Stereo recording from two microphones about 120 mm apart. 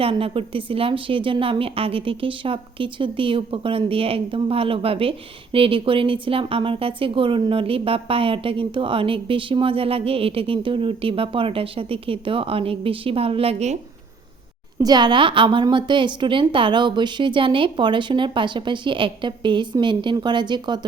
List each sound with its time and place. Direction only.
0.0 s speech: 50° right (ahead or behind)
14.8 s speech: 35° right (ahead or behind)